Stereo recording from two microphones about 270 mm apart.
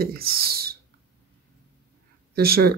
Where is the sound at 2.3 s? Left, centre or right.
Right.